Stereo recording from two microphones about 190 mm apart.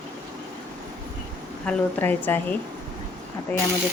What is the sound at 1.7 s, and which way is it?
Speech, 10° left (ahead or behind).